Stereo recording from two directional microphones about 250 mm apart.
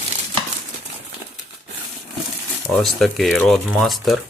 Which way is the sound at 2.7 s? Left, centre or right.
Centre.